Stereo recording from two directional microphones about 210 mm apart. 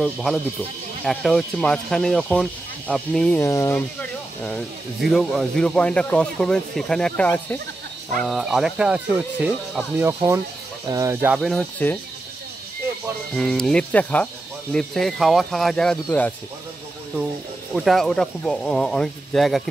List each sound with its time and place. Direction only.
0.0 s speech: centre (ahead or behind)
11.3 s speech: centre (ahead or behind)
13.3 s speech: 5° left (ahead or behind)
17.7 s speech: centre (ahead or behind)